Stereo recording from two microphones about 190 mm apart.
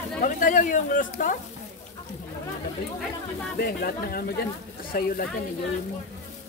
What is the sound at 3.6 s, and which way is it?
Speech, 55° left (ahead or behind).